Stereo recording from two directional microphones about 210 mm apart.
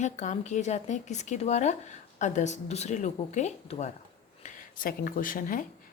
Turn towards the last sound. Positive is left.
turn(degrees=40)  # may be behind; listen again after turning